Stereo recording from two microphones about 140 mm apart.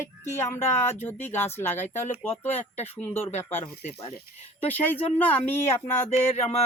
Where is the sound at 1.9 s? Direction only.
55° left (ahead or behind).